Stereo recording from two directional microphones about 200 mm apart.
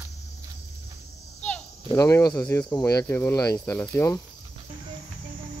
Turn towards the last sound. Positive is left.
turn(degrees=10)  # may be behind; listen again after turning